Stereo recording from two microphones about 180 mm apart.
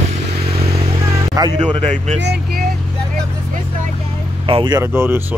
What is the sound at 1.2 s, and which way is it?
Vehicle, 20° right (ahead or behind).